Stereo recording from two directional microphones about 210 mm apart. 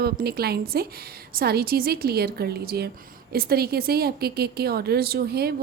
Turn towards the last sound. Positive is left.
turn(degrees=-50)  # may be behind; listen again after turning